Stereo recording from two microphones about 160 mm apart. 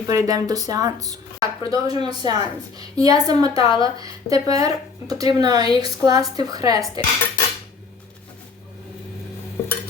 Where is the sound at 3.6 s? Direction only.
30° left (ahead or behind).